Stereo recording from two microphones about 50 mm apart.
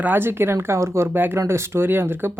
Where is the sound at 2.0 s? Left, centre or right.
Right.